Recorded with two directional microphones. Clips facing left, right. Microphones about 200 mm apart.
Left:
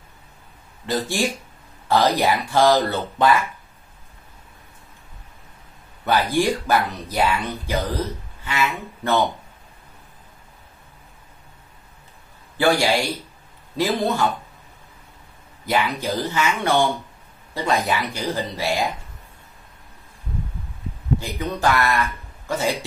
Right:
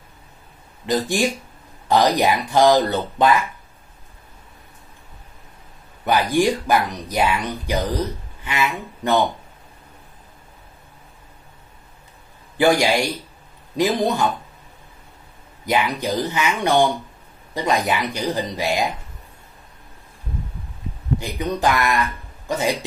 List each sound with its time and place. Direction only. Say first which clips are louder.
0.8 s speech: right 3 dB; 15° right (ahead or behind)
6.0 s speech: right 2 dB; 15° right (ahead or behind)
12.5 s speech: right 2 dB; 15° right (ahead or behind)
15.6 s speech: right 1 dB; 15° right (ahead or behind)
21.2 s speech: right 5 dB; 15° right (ahead or behind)